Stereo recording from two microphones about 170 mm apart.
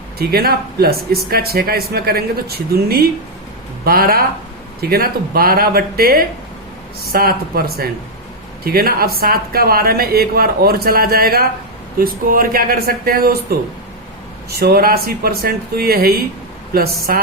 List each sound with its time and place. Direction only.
0.2 s speech: 65° right (ahead or behind)
14.6 s speech: 65° right (ahead or behind)